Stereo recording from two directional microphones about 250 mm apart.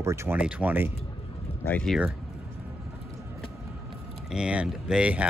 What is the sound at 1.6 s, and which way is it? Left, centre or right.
Speech, centre.